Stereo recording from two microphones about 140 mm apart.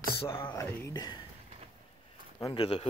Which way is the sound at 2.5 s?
40° left (ahead or behind).